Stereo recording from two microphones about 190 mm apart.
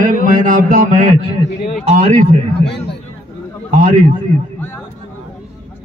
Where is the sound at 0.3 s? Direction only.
45° right (ahead or behind).